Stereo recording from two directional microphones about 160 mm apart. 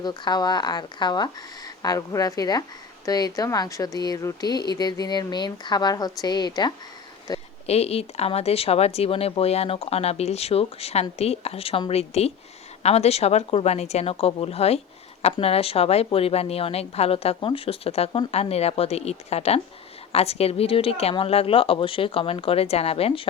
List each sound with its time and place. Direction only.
0.0 s speech: 25° left (ahead or behind)
7.7 s speech: 40° left (ahead or behind)